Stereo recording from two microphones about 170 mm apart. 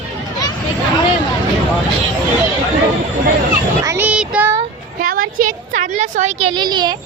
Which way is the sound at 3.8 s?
15° right (ahead or behind).